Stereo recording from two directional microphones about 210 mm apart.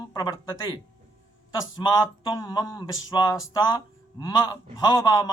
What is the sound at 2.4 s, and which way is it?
A man's voice, 20° left (ahead or behind).